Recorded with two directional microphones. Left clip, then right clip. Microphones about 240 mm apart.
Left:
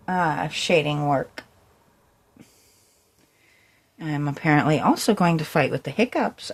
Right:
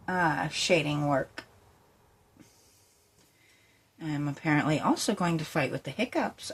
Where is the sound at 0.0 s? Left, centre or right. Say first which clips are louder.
Left 5 dB; left.